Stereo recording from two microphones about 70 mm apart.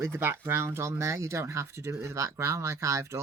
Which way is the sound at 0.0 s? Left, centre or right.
Right.